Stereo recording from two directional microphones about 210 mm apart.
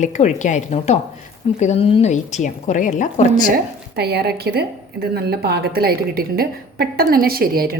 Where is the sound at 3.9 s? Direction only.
50° right (ahead or behind).